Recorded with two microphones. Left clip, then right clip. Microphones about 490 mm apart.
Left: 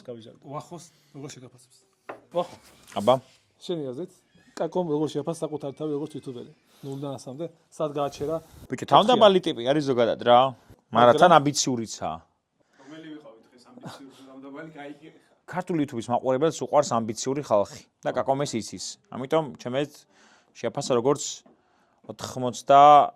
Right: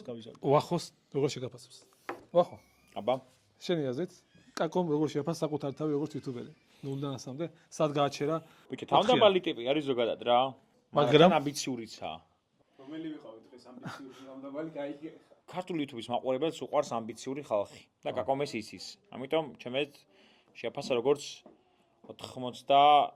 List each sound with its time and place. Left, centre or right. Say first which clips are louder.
0.0 s speech: left 3 dB; centre
0.4 s speech: right 12 dB; right
2.8 s speech: left 10 dB; left
3.6 s a man's voice: left 1 dB; centre
5.4 s a man's voice: left 2 dB; centre
7.7 s speech: left 1 dB; centre
8.8 s speech: left 7 dB; left
11.3 s speech: left 10 dB; left
15.4 s speech: left 8 dB; left
18.0 s speech: left 6 dB; left
22.0 s speech: left 9 dB; left